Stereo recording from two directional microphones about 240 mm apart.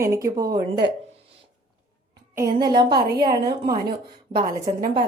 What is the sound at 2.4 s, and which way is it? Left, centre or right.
A woman's voice, centre.